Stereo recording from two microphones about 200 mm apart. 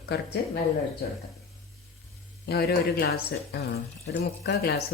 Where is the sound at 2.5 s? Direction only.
50° left (ahead or behind).